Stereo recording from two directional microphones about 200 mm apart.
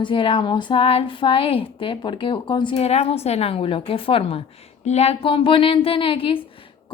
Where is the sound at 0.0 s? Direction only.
25° left (ahead or behind).